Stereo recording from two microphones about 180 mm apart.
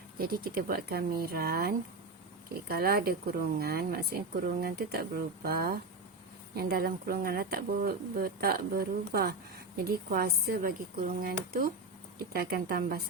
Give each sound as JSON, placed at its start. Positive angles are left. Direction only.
{"t": 0.2, "sound": "speech", "side_deg": -55}